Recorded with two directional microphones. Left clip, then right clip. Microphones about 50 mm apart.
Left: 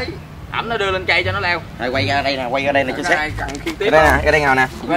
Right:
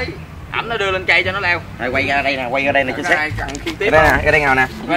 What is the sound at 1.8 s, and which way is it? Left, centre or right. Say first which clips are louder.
Speech: even; left.